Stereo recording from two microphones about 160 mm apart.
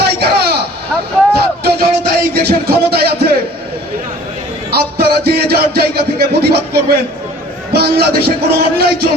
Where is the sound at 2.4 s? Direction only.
80° right.